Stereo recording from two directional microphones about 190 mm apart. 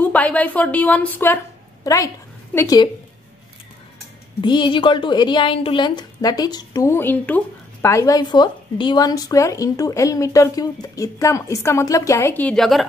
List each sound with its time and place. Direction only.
0.0 s a woman's voice: 10° left (ahead or behind)
4.4 s a woman's voice: 25° left (ahead or behind); by 12.8 s centre (ahead or behind)